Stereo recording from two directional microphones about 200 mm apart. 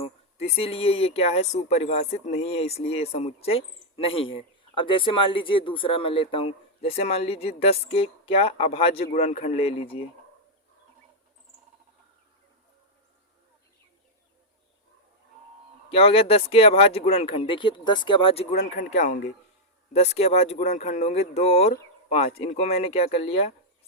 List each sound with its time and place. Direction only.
0.0 s speech: 30° left (ahead or behind)
15.9 s speech: 30° left (ahead or behind)
18.6 s speech: 35° left (ahead or behind)